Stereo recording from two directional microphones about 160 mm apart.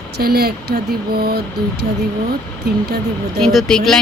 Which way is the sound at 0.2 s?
75° right (ahead or behind).